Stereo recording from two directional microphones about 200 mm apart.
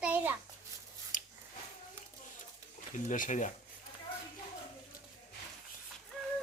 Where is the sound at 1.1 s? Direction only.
40° left (ahead or behind).